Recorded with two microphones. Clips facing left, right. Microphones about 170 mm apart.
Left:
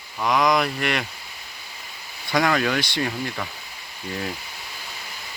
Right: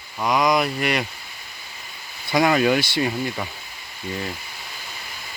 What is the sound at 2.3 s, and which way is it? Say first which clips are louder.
Speech: right 3 dB; 10° right (ahead or behind).